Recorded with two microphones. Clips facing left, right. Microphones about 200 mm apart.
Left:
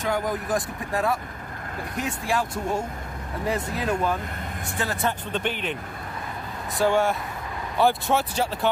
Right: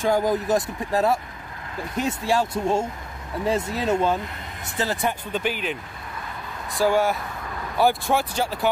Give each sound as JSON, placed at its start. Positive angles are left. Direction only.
{"t": 0.0, "sound": "speech", "side_deg": -30}
{"t": 5.0, "sound": "speech", "side_deg": -5}
{"t": 6.8, "sound": "speech", "side_deg": 0}